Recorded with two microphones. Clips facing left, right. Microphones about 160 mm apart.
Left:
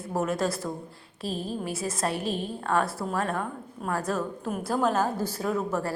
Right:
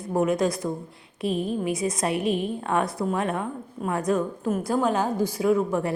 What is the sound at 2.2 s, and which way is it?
Speech, 60° right (ahead or behind).